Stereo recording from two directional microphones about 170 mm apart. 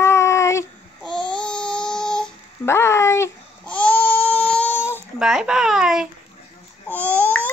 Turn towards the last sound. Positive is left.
turn(degrees=10)  # may be behind; listen again after turning